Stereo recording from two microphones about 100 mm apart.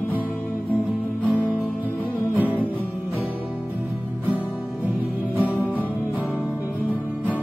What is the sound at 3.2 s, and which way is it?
Music, 20° right (ahead or behind).